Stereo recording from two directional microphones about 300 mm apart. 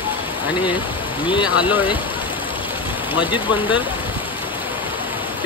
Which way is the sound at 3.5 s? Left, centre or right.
Centre.